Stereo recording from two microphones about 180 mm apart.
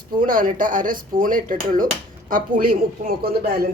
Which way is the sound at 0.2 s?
50° right (ahead or behind).